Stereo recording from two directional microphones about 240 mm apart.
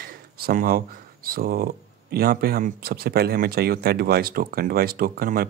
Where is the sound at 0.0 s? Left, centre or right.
Right.